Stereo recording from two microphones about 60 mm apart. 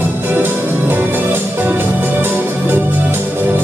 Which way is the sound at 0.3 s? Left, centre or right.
Right.